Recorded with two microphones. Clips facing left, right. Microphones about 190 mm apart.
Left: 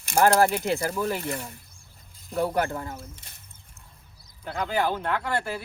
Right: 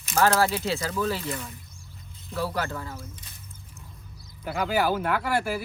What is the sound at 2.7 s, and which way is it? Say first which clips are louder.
Speech: left 2 dB; 30° left (ahead or behind).